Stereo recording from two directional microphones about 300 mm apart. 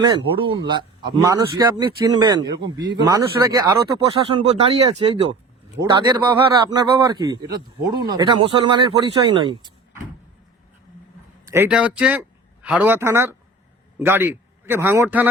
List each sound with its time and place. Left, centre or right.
0.0 s a man's voice: centre
11.5 s a man's voice: centre